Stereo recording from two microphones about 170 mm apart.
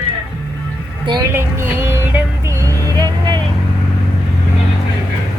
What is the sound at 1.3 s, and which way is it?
Music, 15° right (ahead or behind).